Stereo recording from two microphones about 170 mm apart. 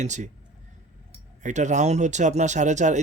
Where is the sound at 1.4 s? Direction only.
45° right (ahead or behind).